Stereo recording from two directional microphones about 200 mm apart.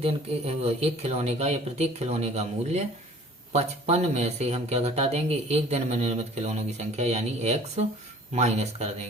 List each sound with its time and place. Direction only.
0.0 s speech: 30° right (ahead or behind)